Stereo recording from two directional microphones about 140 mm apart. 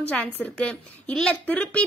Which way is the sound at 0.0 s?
10° left (ahead or behind).